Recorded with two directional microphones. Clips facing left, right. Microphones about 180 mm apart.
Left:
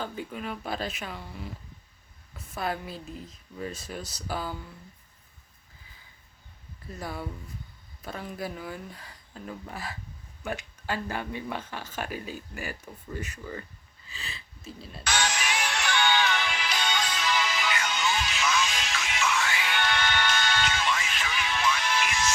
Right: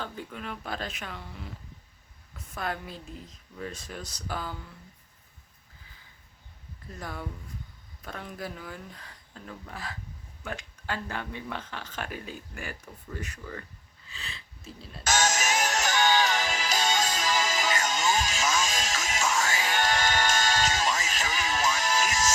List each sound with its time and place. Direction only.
0.0 s speech: 5° left (ahead or behind)
2.6 s speech: 5° left (ahead or behind)
7.0 s speech: 5° left (ahead or behind)
15.0 s music: 45° right (ahead or behind)